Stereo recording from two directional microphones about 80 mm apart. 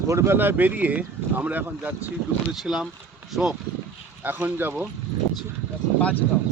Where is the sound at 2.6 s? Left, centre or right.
Centre.